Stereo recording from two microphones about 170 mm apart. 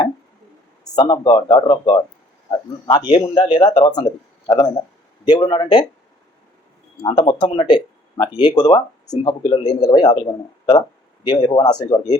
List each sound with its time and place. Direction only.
0.9 s speech: 25° left (ahead or behind)
7.0 s speech: 30° left (ahead or behind)